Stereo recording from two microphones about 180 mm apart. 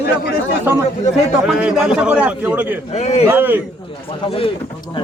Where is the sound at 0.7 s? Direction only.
10° right (ahead or behind).